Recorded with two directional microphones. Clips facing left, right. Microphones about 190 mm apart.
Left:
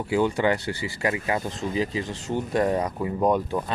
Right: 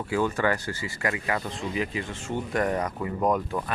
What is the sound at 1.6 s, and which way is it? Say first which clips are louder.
Speech: left 3 dB; 40° left (ahead or behind).